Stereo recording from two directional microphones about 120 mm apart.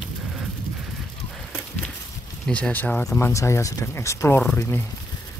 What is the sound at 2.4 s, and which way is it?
Speech, 10° left (ahead or behind).